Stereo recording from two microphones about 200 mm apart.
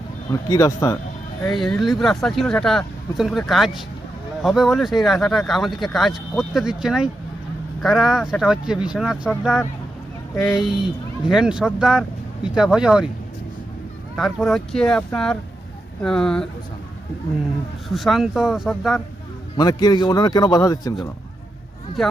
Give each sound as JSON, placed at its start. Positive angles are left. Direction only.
{"t": 0.3, "sound": "speech", "side_deg": 15}
{"t": 1.5, "sound": "speech", "side_deg": 0}
{"t": 10.3, "sound": "speech", "side_deg": 0}
{"t": 14.2, "sound": "speech", "side_deg": 0}
{"t": 17.8, "sound": "speech", "side_deg": 0}
{"t": 19.5, "sound": "speech", "side_deg": 20}
{"t": 22.0, "sound": "speech", "side_deg": 0}